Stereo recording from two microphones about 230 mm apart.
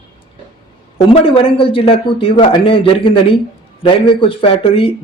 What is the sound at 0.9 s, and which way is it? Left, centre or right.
Speech, left.